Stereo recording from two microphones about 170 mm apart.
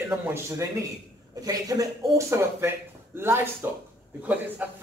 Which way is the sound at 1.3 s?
20° right (ahead or behind).